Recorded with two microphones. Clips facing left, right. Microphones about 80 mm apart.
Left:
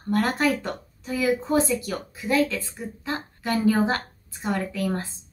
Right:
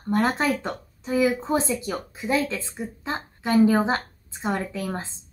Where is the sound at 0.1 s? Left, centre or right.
Right.